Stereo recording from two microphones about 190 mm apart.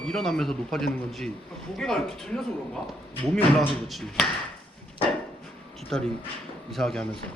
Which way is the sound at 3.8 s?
Centre (ahead or behind).